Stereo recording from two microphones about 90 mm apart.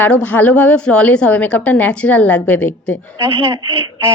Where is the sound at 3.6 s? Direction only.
70° right (ahead or behind).